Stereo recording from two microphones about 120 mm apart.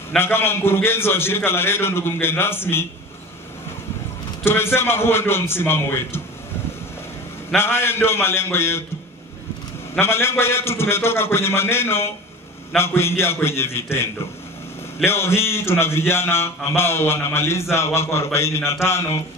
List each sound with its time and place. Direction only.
0.2 s a man's voice: 20° left (ahead or behind)
4.5 s a man's voice: 20° left (ahead or behind)
7.5 s a man's voice: 20° left (ahead or behind)
9.9 s a man's voice: 20° left (ahead or behind)
15.0 s a man's voice: 20° left (ahead or behind)